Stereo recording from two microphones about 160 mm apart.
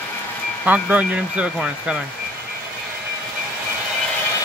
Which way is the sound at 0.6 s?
10° right (ahead or behind).